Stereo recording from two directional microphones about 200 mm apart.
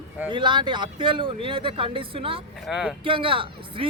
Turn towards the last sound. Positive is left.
turn(degrees=-25)  # may be behind; listen again after turning